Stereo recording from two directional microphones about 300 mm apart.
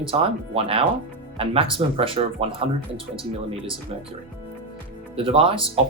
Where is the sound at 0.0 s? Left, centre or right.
Centre.